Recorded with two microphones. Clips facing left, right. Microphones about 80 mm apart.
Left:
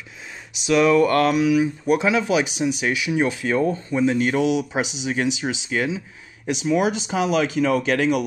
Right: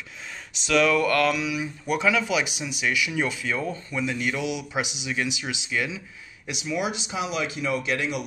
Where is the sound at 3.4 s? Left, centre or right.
Left.